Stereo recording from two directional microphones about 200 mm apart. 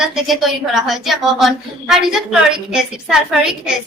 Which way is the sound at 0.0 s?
Centre (ahead or behind).